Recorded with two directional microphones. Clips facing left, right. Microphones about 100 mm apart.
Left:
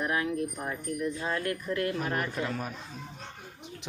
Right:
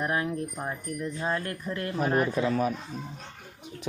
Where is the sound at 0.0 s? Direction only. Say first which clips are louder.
Right 1 dB; 30° right (ahead or behind).